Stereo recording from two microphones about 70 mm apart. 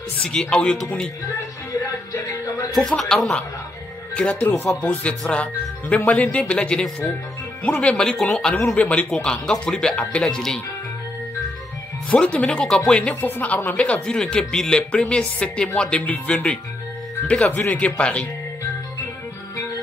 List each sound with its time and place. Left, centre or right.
0.2 s speech: centre
3.0 s speech: centre
4.1 s speech: centre
8.7 s speech: centre
12.1 s speech: centre
13.1 s speech: left